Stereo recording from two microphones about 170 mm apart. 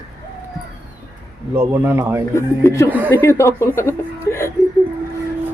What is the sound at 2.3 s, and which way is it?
Speech, 15° left (ahead or behind).